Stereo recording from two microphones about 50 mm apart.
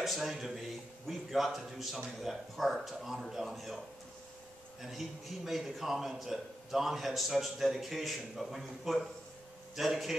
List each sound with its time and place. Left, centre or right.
0.0 s a man's voice: centre
4.8 s a man's voice: centre